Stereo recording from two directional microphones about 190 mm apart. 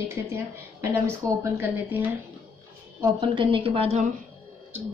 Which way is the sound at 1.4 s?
15° right (ahead or behind).